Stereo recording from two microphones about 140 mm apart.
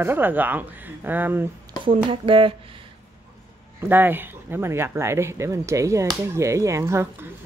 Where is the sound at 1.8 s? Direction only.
40° right (ahead or behind).